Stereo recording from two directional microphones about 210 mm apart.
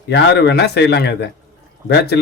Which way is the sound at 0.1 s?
55° left (ahead or behind).